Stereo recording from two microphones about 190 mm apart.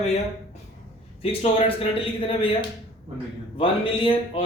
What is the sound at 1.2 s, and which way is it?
A man's voice, 30° left (ahead or behind).